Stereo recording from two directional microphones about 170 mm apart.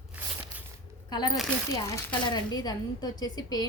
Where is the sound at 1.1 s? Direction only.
25° left (ahead or behind).